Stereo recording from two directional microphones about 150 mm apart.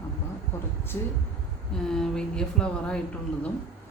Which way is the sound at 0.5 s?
15° left (ahead or behind).